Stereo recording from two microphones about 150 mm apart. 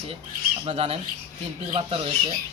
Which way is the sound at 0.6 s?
40° right (ahead or behind).